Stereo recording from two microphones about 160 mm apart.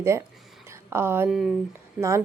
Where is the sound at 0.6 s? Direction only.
15° right (ahead or behind).